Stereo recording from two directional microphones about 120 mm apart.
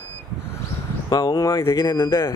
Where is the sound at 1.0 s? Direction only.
35° left (ahead or behind).